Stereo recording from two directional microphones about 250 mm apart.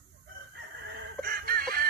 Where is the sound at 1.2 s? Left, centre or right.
Right.